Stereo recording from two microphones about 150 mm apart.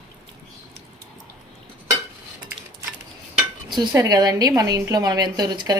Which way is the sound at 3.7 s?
25° right (ahead or behind).